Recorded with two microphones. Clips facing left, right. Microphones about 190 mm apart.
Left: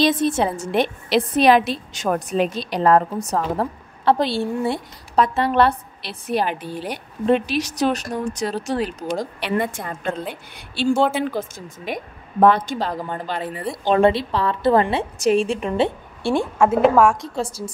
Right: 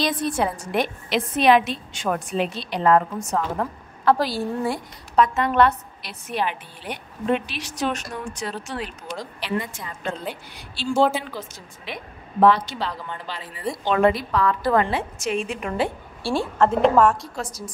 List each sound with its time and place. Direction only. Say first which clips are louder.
0.0 s a woman's voice: left 5 dB; 25° left (ahead or behind); by 9.3 s 40° left (ahead or behind)
9.4 s a woman's voice: left 5 dB; 55° left (ahead or behind)
13.8 s a woman's voice: left 3 dB; 30° left (ahead or behind)
16.6 s a woman's voice: left 2 dB; 5° left (ahead or behind)
17.4 s a woman's voice: left 6 dB; 30° left (ahead or behind)